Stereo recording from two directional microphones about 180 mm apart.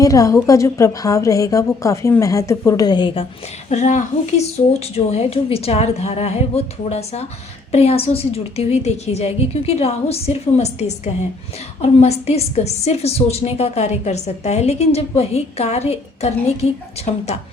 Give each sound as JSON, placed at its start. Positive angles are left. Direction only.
{"t": 0.0, "sound": "a woman's voice", "side_deg": 20}
{"t": 3.7, "sound": "a woman's voice", "side_deg": 40}